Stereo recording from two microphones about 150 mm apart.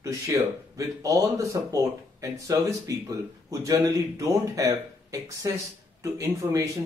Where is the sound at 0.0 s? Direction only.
20° right (ahead or behind).